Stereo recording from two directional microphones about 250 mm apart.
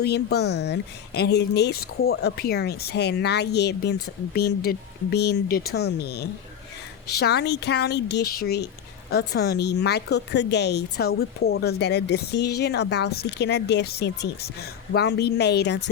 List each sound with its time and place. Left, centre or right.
0.0 s speech: left